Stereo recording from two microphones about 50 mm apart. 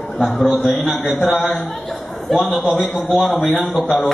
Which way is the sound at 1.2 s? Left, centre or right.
Left.